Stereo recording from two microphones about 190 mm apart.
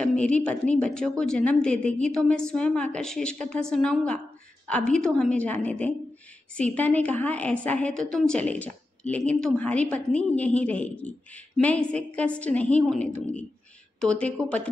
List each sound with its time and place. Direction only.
0.1 s a woman's voice: 5° left (ahead or behind)